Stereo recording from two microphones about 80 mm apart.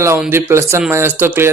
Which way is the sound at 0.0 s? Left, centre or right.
Right.